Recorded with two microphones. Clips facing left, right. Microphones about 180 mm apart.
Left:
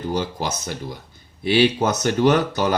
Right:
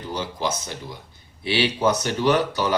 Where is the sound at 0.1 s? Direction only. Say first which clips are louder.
Even; 45° left (ahead or behind).